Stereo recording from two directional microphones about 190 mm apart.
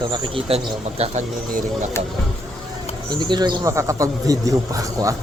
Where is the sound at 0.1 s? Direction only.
30° right (ahead or behind).